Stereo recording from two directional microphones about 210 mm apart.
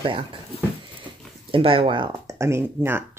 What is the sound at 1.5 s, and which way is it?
Speech, 25° right (ahead or behind).